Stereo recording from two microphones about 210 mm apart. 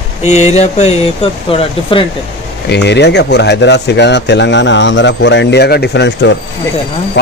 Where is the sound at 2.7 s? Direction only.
55° left (ahead or behind).